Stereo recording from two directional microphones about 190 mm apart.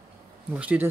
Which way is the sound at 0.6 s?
10° right (ahead or behind).